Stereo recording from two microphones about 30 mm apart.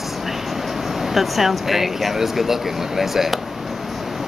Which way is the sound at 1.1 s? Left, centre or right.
Centre.